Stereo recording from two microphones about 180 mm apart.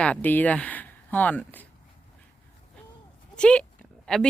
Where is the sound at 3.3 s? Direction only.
5° left (ahead or behind).